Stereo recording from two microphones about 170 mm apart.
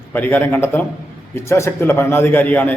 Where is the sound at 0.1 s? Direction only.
10° left (ahead or behind).